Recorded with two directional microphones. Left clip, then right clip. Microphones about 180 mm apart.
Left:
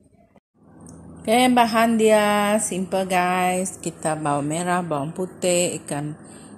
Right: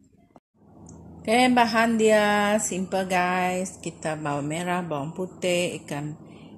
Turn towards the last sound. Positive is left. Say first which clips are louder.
# left 4 dB
turn(degrees=10)  # may be behind; listen again after turning